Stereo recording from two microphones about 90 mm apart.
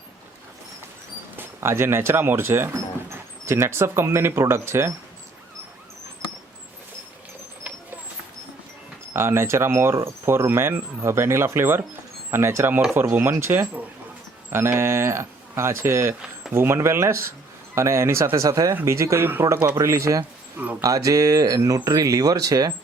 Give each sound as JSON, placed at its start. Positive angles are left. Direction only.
{"t": 1.4, "sound": "speech", "side_deg": -30}
{"t": 9.1, "sound": "speech", "side_deg": -30}